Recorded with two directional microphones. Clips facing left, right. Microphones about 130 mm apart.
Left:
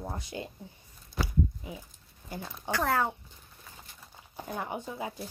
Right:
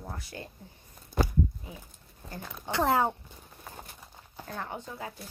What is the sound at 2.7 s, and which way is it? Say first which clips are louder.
Speech: right 3 dB; 20° right (ahead or behind).